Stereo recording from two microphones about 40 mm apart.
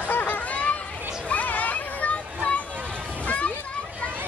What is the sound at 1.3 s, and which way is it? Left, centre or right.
Children playing, left.